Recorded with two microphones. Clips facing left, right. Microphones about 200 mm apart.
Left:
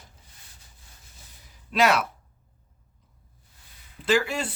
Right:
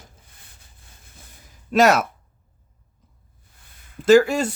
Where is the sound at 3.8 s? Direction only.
45° right (ahead or behind).